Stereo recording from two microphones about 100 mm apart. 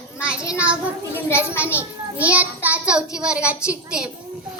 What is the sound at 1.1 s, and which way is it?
Speech, 25° left (ahead or behind).